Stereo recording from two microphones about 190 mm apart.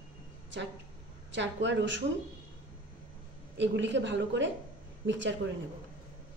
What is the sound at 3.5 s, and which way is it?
A woman's voice, 70° right (ahead or behind).